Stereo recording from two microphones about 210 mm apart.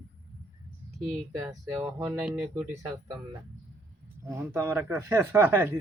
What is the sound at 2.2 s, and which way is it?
Speech, 5° right (ahead or behind).